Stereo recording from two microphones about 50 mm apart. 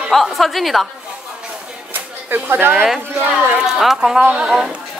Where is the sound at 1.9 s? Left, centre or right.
Right.